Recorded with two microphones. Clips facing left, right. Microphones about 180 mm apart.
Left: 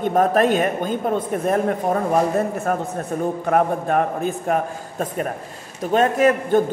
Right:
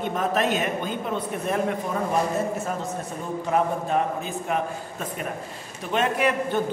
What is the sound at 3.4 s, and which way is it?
A man's voice, 55° left (ahead or behind).